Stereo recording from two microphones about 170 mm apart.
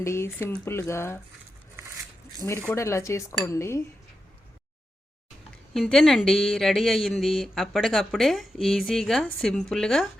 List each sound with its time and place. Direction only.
0.0 s speech: 15° left (ahead or behind)
2.4 s speech: 15° left (ahead or behind)
5.7 s speech: centre (ahead or behind)